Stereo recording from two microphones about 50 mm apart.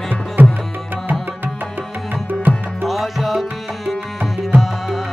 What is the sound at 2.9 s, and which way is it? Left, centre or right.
Music, centre.